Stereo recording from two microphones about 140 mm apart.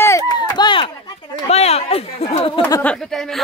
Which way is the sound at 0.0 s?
25° left (ahead or behind).